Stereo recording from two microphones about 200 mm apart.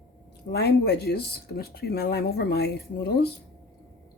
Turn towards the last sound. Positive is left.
turn(degrees=55)  # may be behind; listen again after turning